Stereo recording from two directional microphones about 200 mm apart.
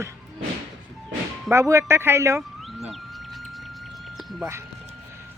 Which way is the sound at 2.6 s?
Centre (ahead or behind).